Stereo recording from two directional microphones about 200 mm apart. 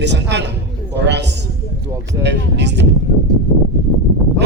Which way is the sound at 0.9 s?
60° right (ahead or behind).